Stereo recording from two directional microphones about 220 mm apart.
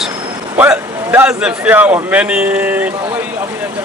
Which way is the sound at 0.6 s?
10° right (ahead or behind).